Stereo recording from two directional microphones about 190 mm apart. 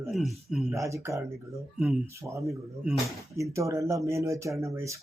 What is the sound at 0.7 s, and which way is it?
Speech, 15° right (ahead or behind).